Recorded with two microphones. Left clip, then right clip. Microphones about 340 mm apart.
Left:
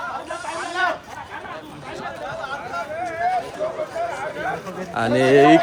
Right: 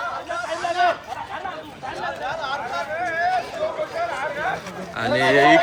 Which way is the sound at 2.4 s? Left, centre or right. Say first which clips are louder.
Even; right.